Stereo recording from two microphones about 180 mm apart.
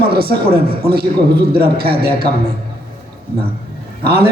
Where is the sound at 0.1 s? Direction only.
60° right (ahead or behind).